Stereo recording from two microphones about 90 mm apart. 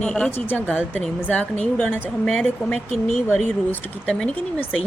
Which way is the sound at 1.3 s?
10° left (ahead or behind).